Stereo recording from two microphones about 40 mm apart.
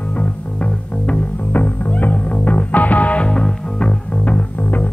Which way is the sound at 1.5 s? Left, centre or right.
Left.